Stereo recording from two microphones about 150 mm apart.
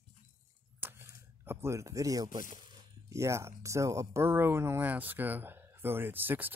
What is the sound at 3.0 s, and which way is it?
Speech, 20° right (ahead or behind).